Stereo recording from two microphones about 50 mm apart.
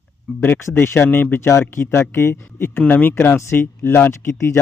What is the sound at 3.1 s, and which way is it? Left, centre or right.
Speech, left.